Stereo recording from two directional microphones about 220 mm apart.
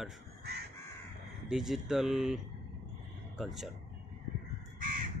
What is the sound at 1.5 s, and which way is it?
Speech, centre (ahead or behind).